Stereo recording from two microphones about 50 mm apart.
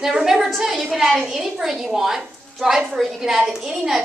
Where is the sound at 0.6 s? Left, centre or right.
Centre.